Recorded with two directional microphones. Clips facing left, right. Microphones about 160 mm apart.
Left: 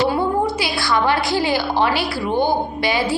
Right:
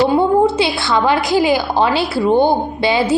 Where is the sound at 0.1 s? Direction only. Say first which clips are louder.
Right 6 dB; 25° right (ahead or behind).